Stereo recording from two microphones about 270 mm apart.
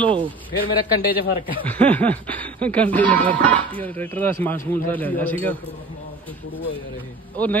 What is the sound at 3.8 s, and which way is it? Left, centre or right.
Speech, centre.